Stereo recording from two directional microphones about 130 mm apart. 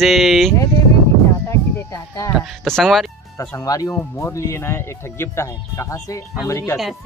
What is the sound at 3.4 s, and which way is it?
Speech, 25° left (ahead or behind).